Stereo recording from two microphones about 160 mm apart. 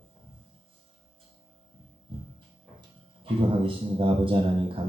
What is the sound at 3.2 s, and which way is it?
A man's voice, 35° right (ahead or behind).